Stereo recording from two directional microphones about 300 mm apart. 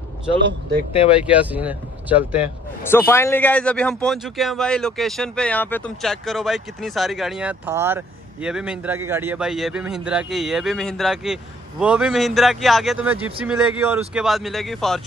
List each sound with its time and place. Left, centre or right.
0.4 s speech: right
1.3 s speech: centre
2.9 s speech: centre